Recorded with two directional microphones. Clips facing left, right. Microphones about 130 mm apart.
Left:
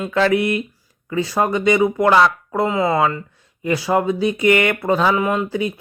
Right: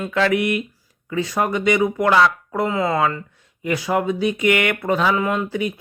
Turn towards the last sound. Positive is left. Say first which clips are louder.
# left 2 dB
turn(degrees=25)  # may be behind; listen again after turning